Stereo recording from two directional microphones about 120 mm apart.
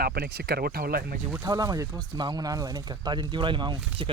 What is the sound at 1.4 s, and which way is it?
Speech, 30° right (ahead or behind).